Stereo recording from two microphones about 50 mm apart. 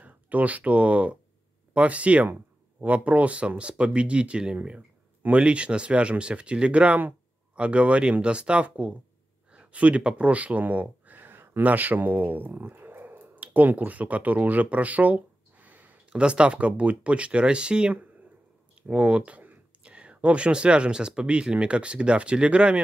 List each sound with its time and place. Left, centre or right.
0.0 s speech: right
7.0 s a sound: right
7.6 s speech: right
16.1 s speech: right